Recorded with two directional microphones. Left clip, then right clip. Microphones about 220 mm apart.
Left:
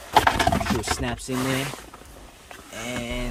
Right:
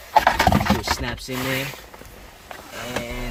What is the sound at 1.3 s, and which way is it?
Speech, 20° left (ahead or behind).